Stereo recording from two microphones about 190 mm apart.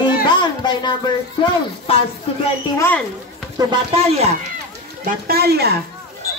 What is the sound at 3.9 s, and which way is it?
Speech, 30° right (ahead or behind).